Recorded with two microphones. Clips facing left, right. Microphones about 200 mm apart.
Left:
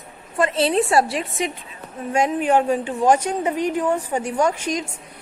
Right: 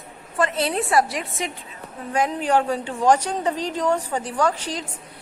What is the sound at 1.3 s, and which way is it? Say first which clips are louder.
A woman's voice: left 4 dB; 15° left (ahead or behind).